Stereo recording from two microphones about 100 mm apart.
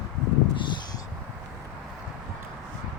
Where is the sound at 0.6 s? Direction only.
50° left (ahead or behind).